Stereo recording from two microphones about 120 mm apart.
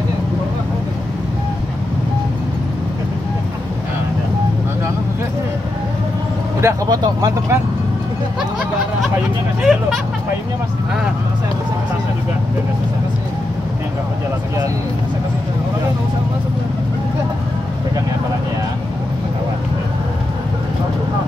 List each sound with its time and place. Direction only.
6.6 s speech: 30° right (ahead or behind)
9.6 s speech: 5° right (ahead or behind)